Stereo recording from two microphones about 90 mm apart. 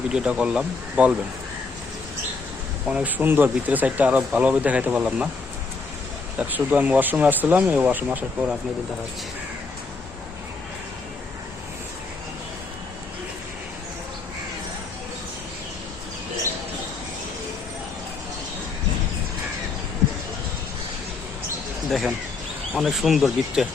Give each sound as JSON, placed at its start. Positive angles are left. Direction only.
{"t": 0.1, "sound": "speech", "side_deg": -10}
{"t": 2.9, "sound": "speech", "side_deg": -20}
{"t": 6.4, "sound": "speech", "side_deg": -20}
{"t": 21.8, "sound": "speech", "side_deg": 0}